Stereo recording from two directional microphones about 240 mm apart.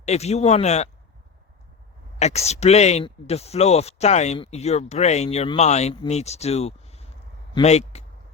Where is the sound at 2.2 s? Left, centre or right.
Left.